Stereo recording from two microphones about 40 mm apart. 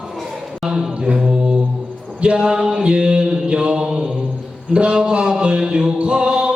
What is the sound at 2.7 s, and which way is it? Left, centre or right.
Mantra, right.